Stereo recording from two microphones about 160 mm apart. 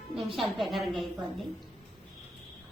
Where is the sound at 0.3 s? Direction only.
Centre (ahead or behind).